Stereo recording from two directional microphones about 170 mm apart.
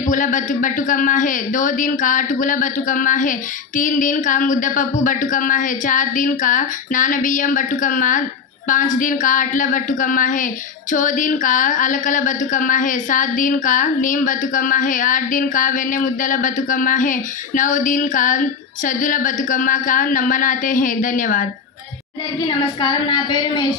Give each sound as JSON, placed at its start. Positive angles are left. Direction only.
{"t": 0.0, "sound": "a woman's voice", "side_deg": 50}
{"t": 22.5, "sound": "a woman's voice", "side_deg": 25}